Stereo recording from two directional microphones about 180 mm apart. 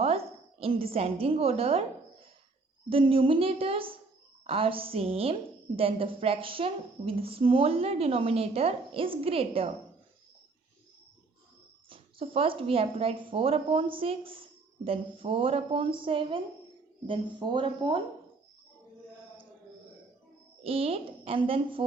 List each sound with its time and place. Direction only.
0.6 s a woman's voice: 30° right (ahead or behind)
2.9 s a woman's voice: 30° right (ahead or behind)
11.9 s a woman's voice: 30° right (ahead or behind)
20.7 s a woman's voice: 30° right (ahead or behind)